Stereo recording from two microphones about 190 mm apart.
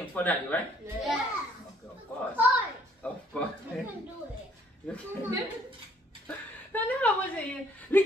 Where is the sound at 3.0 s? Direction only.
5° left (ahead or behind).